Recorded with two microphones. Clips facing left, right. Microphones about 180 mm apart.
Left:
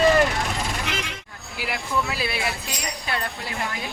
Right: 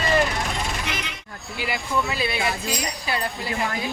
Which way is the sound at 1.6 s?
Centre (ahead or behind).